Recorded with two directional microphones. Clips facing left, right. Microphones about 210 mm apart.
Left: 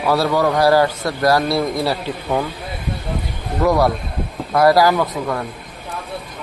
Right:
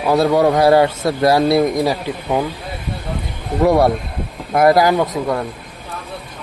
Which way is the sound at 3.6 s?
25° right (ahead or behind).